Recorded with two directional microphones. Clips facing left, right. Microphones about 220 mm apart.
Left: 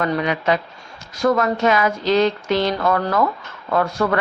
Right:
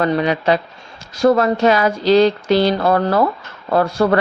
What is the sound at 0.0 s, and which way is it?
A woman's voice, 30° right (ahead or behind).